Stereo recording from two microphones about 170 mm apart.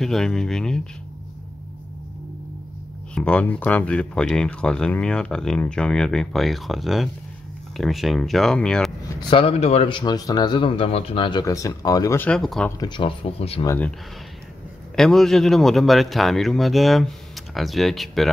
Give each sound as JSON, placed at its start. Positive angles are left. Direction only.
{"t": 0.0, "sound": "speech", "side_deg": 0}
{"t": 3.2, "sound": "speech", "side_deg": 5}
{"t": 9.3, "sound": "speech", "side_deg": 35}
{"t": 12.3, "sound": "speech", "side_deg": 5}
{"t": 12.6, "sound": "speech", "side_deg": 20}
{"t": 13.7, "sound": "speech", "side_deg": 10}
{"t": 15.0, "sound": "speech", "side_deg": 0}